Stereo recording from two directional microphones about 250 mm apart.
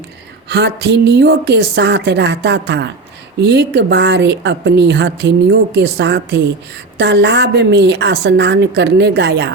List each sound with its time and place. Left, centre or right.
0.4 s a woman's voice: right